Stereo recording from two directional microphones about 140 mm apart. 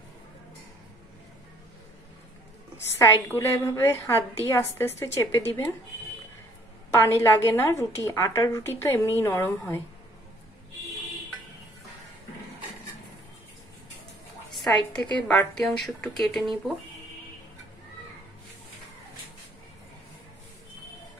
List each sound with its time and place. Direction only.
3.0 s a woman's voice: 20° left (ahead or behind)
6.9 s a woman's voice: 20° left (ahead or behind)
14.7 s a woman's voice: 10° left (ahead or behind)